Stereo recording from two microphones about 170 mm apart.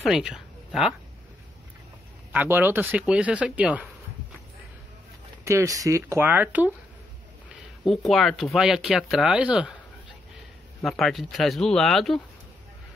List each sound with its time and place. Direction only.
0.0 s speech: 5° right (ahead or behind)
2.3 s speech: 10° right (ahead or behind)
5.4 s speech: 15° right (ahead or behind)
7.8 s speech: centre (ahead or behind)
10.8 s speech: centre (ahead or behind)